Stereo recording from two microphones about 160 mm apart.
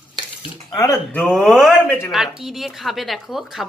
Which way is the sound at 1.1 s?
5° left (ahead or behind).